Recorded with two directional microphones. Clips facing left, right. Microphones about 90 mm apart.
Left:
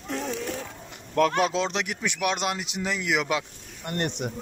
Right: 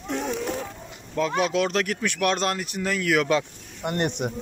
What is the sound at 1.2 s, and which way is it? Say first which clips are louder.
Speech: left 2 dB; 55° left (ahead or behind).